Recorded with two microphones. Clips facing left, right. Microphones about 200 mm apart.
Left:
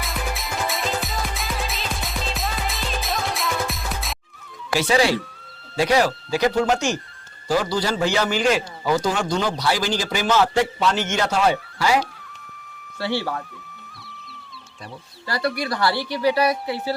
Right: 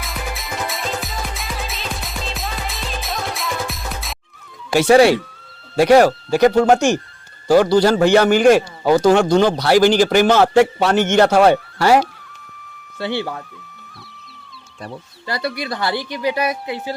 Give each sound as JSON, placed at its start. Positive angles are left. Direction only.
{"t": 0.0, "sound": "music", "side_deg": 0}
{"t": 4.8, "sound": "a man's voice", "side_deg": -60}
{"t": 13.0, "sound": "a woman's voice", "side_deg": -20}
{"t": 15.3, "sound": "a woman's voice", "side_deg": -20}